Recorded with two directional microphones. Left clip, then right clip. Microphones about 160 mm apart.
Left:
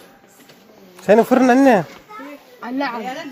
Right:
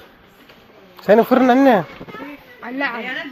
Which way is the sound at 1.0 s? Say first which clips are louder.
Even; 25° left (ahead or behind).